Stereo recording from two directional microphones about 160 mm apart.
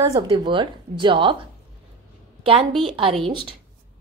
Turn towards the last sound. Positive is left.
turn(degrees=-35)  # may be behind; listen again after turning